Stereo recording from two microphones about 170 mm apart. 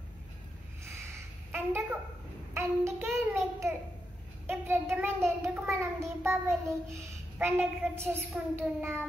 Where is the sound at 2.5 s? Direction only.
15° right (ahead or behind).